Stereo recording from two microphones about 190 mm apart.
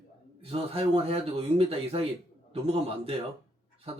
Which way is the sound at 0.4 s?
30° right (ahead or behind).